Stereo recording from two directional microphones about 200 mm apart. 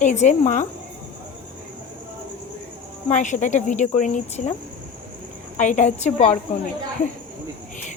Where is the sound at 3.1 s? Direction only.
40° left (ahead or behind).